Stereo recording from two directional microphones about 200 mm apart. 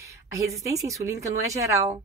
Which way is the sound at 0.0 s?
15° right (ahead or behind).